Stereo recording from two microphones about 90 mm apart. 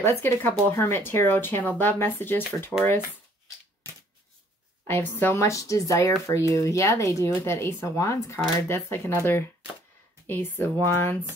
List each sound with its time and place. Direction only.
0.0 s speech: 25° left (ahead or behind)
4.8 s speech: 20° left (ahead or behind)